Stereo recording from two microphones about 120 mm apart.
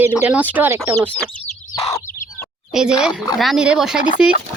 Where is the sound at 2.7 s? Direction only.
5° right (ahead or behind).